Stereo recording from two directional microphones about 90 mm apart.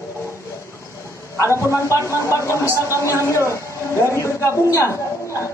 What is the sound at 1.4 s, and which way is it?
Speech, 30° left (ahead or behind).